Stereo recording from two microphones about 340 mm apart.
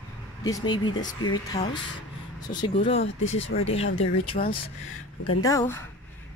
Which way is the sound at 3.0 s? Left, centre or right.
Left.